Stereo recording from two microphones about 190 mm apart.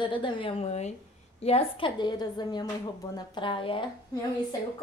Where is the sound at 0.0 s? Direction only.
25° left (ahead or behind).